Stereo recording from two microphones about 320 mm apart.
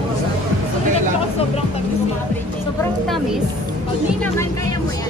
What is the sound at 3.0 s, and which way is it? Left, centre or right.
Speech, centre.